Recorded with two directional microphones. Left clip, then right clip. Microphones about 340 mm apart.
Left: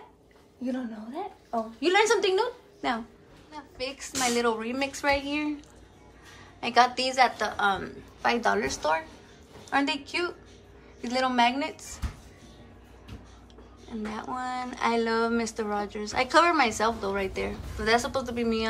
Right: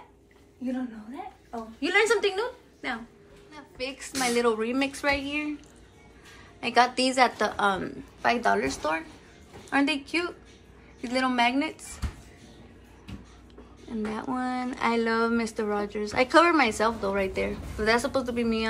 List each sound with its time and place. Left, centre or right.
1.8 s a woman's voice: centre
6.6 s speech: centre
13.8 s speech: centre